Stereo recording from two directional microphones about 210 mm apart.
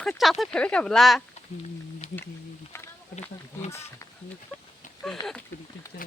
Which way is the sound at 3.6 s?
15° left (ahead or behind).